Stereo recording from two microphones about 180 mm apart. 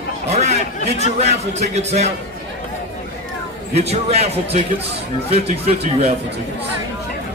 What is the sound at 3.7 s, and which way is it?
Speech, 35° right (ahead or behind).